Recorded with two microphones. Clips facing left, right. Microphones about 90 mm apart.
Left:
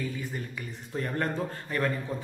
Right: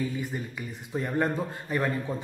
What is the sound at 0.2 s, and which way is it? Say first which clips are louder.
Speech: right 2 dB; 15° right (ahead or behind).